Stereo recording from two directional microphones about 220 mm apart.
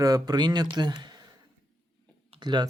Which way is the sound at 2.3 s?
20° right (ahead or behind).